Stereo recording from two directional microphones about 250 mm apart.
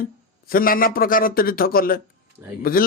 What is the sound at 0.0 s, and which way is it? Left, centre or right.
Speech, left.